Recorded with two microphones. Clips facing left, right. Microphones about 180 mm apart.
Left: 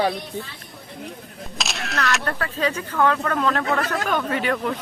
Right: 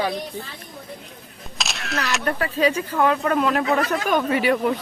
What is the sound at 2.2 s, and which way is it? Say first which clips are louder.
Speech: right 4 dB; 10° right (ahead or behind).